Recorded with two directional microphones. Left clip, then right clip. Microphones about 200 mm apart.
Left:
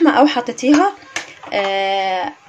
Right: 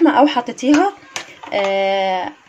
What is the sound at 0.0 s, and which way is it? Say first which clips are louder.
Speech: even; centre (ahead or behind).